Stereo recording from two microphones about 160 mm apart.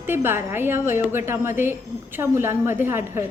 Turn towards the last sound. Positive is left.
turn(degrees=-15)  # may be behind; listen again after turning